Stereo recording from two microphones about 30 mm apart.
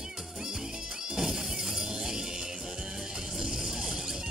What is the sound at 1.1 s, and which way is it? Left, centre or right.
Music, centre.